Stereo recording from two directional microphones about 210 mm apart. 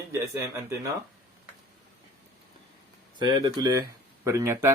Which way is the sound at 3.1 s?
20° right (ahead or behind).